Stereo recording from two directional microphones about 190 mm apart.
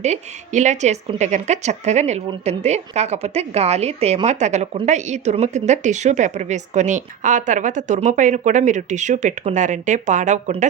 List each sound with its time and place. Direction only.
0.0 s a woman's voice: 40° right (ahead or behind)